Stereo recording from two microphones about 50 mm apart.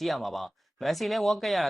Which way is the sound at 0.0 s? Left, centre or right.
Centre.